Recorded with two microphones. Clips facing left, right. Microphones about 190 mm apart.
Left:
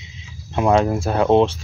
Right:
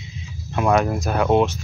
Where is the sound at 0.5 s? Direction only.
25° left (ahead or behind).